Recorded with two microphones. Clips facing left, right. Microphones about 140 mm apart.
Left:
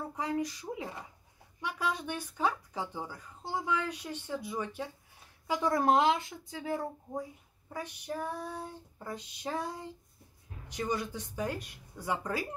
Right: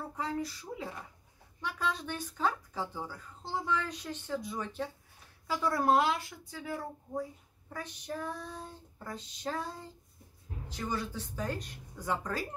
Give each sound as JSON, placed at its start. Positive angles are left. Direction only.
{"t": 0.2, "sound": "speech", "side_deg": 15}
{"t": 7.7, "sound": "speech", "side_deg": 10}